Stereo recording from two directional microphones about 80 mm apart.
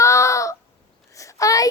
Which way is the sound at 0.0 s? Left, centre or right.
Left.